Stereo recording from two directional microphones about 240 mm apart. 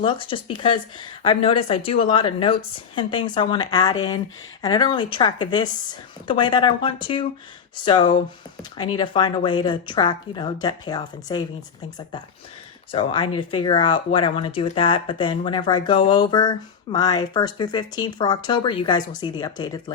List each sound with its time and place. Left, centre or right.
0.0 s speech: left
12.9 s speech: left